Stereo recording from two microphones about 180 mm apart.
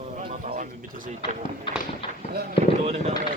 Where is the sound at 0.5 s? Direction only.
50° right (ahead or behind).